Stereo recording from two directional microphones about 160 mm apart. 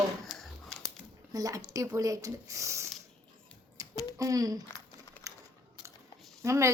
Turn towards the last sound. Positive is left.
turn(degrees=-20)  # may be behind; listen again after turning